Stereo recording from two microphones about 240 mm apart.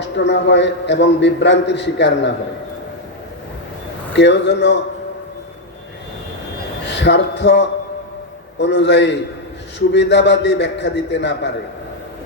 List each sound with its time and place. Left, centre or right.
0.0 s a man's voice: left
4.1 s a man's voice: left
6.8 s a man's voice: left